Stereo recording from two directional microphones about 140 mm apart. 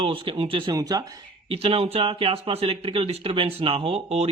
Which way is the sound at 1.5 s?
40° right (ahead or behind).